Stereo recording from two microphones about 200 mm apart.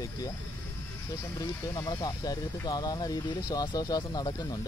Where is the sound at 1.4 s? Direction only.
15° left (ahead or behind).